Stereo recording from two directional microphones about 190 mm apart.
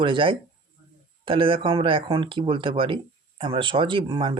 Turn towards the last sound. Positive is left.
turn(degrees=-25)  # may be behind; listen again after turning